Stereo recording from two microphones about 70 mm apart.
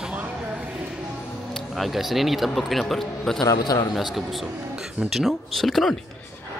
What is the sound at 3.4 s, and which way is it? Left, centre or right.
Speech, left.